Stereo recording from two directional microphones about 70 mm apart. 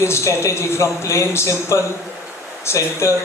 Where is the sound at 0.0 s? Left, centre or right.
Left.